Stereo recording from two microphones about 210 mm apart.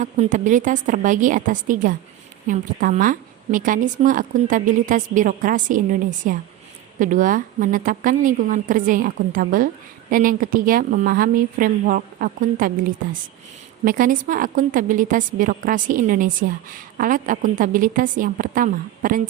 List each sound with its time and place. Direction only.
0.0 s a woman's voice: 35° right (ahead or behind)